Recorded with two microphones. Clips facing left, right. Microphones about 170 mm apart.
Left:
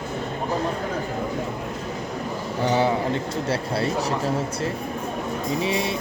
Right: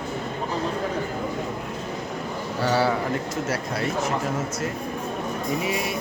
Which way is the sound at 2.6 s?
20° left (ahead or behind).